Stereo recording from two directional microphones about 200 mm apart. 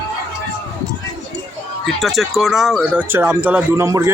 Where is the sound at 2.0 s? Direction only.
Centre (ahead or behind).